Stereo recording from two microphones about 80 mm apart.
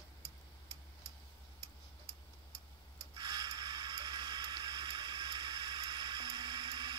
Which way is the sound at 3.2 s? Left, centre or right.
Right.